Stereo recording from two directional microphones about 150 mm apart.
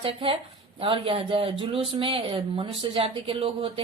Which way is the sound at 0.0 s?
40° right (ahead or behind).